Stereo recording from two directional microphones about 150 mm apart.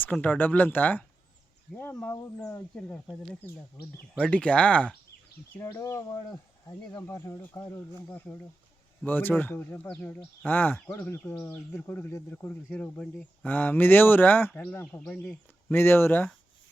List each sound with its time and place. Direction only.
0.0 s speech: 10° left (ahead or behind)
5.5 s speech: 20° left (ahead or behind)